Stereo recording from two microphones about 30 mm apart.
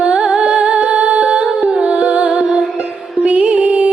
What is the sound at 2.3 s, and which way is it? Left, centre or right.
Music, right.